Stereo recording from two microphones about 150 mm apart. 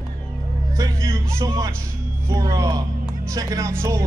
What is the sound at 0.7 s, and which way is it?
Speech, 20° right (ahead or behind).